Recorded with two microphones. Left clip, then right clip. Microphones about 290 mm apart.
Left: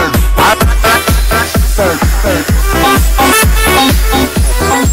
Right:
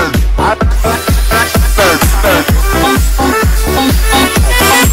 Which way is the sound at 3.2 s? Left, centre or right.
Left.